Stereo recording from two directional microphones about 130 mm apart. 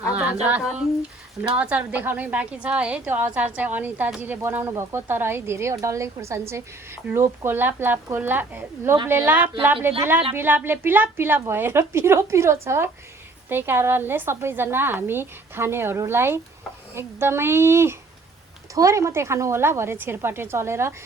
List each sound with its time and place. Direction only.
0.1 s a woman's voice: 10° right (ahead or behind)